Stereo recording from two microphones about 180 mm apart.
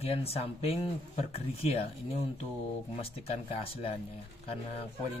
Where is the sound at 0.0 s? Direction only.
35° left (ahead or behind).